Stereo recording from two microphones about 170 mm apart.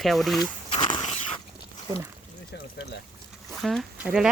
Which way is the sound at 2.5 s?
85° left.